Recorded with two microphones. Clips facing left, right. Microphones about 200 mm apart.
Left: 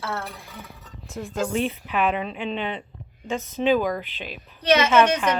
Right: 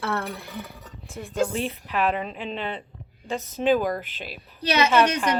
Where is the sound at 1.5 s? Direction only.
Centre (ahead or behind).